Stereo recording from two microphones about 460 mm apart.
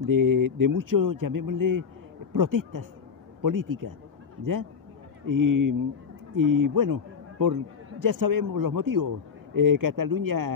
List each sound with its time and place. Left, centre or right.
0.0 s a man's voice: right
5.2 s a man's voice: right